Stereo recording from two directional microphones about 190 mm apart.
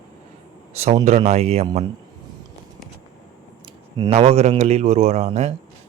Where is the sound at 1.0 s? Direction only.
35° right (ahead or behind).